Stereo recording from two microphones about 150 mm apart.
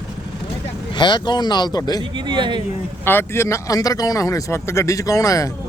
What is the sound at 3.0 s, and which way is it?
Speech, 15° left (ahead or behind).